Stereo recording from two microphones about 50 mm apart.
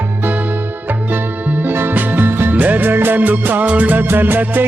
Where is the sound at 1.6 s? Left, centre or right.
Right.